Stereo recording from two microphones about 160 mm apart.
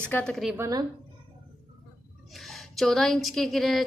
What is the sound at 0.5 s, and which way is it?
Speech, 20° right (ahead or behind).